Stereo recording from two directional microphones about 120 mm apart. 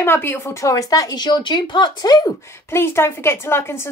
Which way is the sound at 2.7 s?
20° left (ahead or behind).